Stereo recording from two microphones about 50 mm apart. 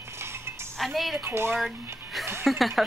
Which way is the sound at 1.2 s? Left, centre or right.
Right.